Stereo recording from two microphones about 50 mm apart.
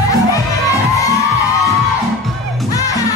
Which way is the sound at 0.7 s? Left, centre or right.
Left.